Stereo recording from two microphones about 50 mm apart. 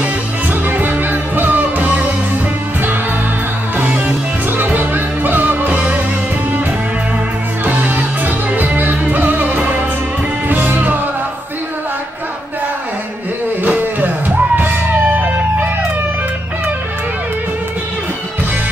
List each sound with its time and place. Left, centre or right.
0.0 s music: right
4.7 s music: right
5.7 s music: right
7.6 s music: right
13.7 s music: right